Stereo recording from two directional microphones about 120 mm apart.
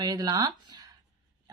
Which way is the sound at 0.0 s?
35° right (ahead or behind).